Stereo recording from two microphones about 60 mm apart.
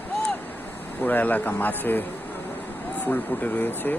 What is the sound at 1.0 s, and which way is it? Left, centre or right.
Speech, left.